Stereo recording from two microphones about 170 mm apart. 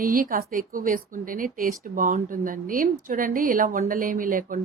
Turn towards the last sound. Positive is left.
turn(degrees=-55)  # may be behind; listen again after turning